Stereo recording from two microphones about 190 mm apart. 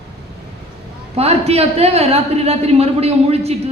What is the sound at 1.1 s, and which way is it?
A man's voice, 35° right (ahead or behind).